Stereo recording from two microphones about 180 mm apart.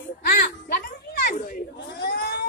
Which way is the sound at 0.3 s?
55° left (ahead or behind).